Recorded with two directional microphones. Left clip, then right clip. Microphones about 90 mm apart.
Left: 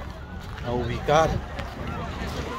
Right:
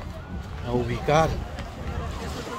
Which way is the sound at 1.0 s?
70° right (ahead or behind).